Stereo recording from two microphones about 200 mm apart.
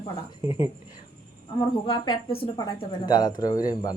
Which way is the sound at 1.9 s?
20° left (ahead or behind).